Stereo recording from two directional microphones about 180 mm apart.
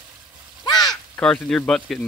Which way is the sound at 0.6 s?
20° left (ahead or behind).